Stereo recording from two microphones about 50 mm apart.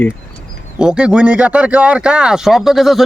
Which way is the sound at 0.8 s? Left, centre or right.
Centre.